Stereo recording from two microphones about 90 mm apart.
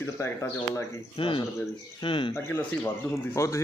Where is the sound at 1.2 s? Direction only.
75° left (ahead or behind).